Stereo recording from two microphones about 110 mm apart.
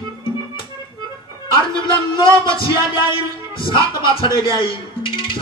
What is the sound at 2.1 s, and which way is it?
Speech, 50° left (ahead or behind).